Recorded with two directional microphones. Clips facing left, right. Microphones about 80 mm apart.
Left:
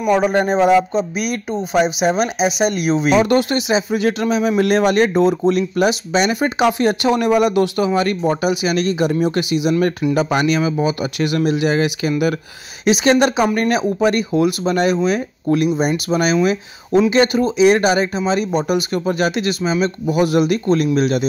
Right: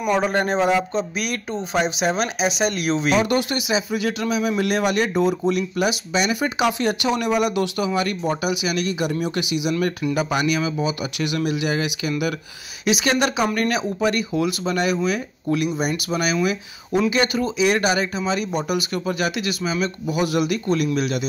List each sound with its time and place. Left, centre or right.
0.1 s speech: centre
3.2 s speech: left